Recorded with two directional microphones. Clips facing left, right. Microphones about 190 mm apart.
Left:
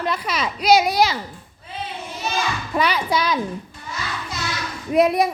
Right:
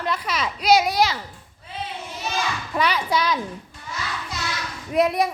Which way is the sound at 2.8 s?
5° left (ahead or behind).